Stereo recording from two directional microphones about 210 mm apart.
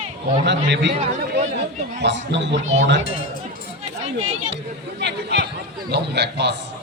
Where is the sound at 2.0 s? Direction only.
55° right (ahead or behind).